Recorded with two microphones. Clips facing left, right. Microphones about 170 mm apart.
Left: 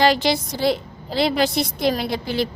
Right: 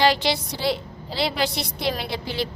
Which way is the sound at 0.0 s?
45° left (ahead or behind).